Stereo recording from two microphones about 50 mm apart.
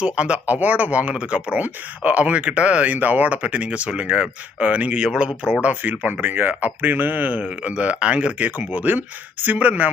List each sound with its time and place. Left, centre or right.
0.0 s speech: right
0.4 s speech: right
5.0 s speech: centre
5.6 s speech: right